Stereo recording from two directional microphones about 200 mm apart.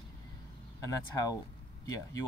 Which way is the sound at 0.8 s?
15° left (ahead or behind).